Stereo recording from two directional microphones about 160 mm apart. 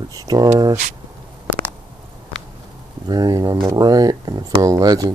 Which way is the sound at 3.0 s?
25° right (ahead or behind).